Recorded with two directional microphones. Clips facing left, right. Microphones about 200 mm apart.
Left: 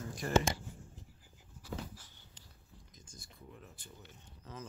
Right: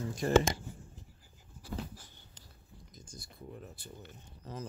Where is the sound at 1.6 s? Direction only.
40° right (ahead or behind).